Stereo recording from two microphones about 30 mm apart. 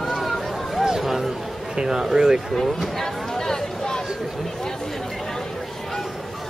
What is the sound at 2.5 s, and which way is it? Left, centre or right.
Speech, centre.